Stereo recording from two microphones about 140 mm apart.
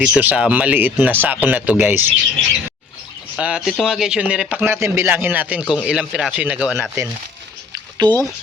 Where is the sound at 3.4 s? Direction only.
5° right (ahead or behind).